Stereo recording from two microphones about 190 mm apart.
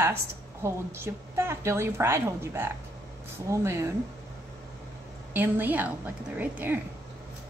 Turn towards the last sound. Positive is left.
turn(degrees=-10)  # may be behind; listen again after turning